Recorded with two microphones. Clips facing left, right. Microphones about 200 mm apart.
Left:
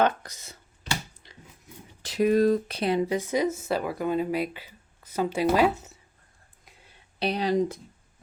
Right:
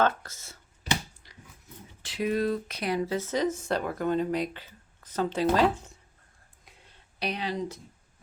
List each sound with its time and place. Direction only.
0.0 s speech: 15° left (ahead or behind)
2.0 s speech: 40° left (ahead or behind)
2.7 s speech: 25° left (ahead or behind); by 6.0 s 5° left (ahead or behind)
6.7 s a sound: centre (ahead or behind)
7.2 s speech: 35° left (ahead or behind)